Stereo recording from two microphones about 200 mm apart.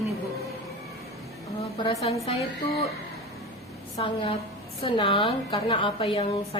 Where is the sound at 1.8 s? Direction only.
30° left (ahead or behind).